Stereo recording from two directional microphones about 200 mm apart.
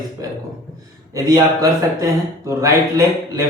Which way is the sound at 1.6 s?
15° right (ahead or behind).